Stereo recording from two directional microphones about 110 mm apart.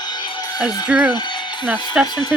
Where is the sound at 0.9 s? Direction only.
15° right (ahead or behind).